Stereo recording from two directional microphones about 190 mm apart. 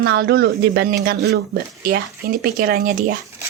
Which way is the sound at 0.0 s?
55° right (ahead or behind).